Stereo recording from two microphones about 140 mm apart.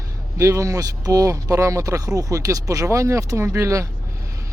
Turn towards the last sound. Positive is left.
turn(degrees=-20)  # may be behind; listen again after turning